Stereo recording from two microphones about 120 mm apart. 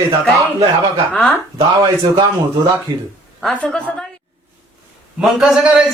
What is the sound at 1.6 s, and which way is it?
Speech, 40° right (ahead or behind).